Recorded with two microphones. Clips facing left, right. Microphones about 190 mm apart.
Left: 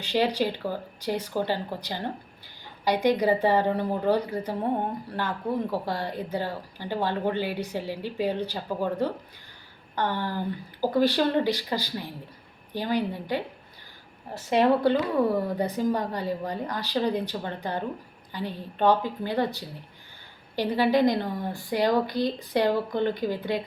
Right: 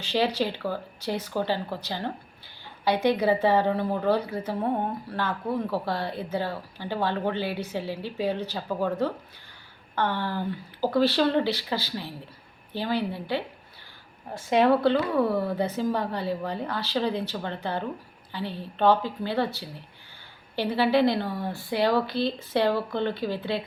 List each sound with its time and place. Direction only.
0.0 s a woman's voice: 15° left (ahead or behind)
14.5 s a woman's voice: 15° left (ahead or behind)